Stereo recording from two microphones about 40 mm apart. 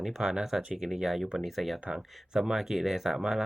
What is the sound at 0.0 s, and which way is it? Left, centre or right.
Speech, centre.